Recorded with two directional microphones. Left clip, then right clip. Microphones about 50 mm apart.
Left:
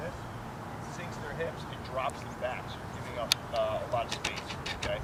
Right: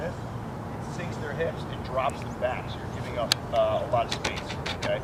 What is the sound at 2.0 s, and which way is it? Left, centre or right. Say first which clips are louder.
Speech: right 6 dB; centre.